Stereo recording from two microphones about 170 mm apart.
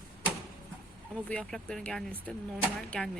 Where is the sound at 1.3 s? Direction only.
5° left (ahead or behind).